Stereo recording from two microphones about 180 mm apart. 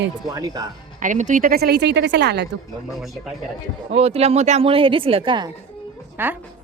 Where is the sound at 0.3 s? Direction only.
20° right (ahead or behind).